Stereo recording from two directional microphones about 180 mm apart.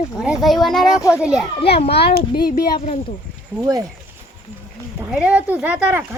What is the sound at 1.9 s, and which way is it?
A child's voice, 65° left (ahead or behind).